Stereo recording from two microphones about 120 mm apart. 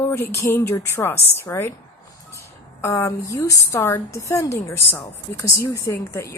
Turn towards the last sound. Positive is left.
turn(degrees=20)  # may be behind; listen again after turning